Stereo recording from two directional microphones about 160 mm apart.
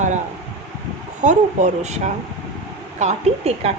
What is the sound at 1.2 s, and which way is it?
Speech, 50° right (ahead or behind).